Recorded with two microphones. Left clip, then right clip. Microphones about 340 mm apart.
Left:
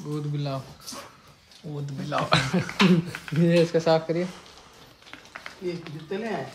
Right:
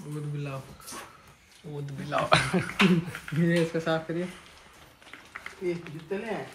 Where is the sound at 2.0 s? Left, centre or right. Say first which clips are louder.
Even; centre.